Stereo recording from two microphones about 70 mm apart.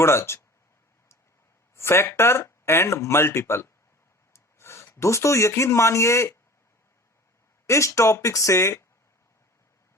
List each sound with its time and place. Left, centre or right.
0.0 s speech: left
1.7 s speech: left
4.3 s rub: left
4.9 s speech: left
7.7 s speech: left